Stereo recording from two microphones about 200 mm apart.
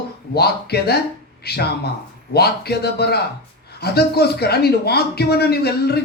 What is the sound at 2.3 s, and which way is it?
Speech, 55° left (ahead or behind).